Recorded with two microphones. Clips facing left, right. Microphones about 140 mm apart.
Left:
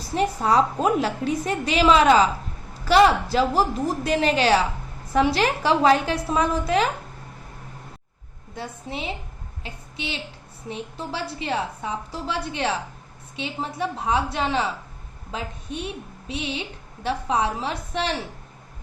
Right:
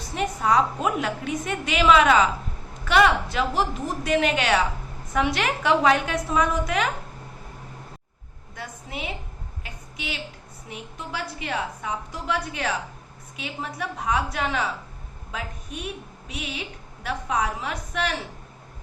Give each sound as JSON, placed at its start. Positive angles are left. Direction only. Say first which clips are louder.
{"t": 0.0, "sound": "a woman's voice", "louder": "left 3 dB", "side_deg": 30}
{"t": 8.5, "sound": "a woman's voice", "louder": "left 3 dB", "side_deg": 30}